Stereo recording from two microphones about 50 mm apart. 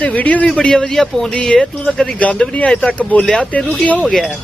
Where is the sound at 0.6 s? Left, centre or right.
Centre.